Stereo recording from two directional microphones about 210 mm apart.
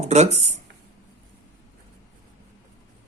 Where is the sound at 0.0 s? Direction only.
30° right (ahead or behind).